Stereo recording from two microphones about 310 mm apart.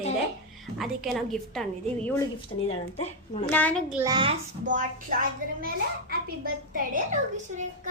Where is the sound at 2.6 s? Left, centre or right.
Centre.